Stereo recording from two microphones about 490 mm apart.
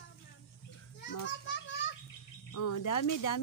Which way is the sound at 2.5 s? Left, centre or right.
Left.